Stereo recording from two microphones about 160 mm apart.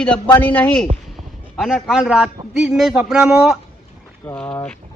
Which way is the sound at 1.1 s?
Centre (ahead or behind).